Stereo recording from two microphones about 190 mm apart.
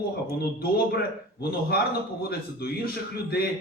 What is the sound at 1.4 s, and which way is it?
Speech, 55° left (ahead or behind).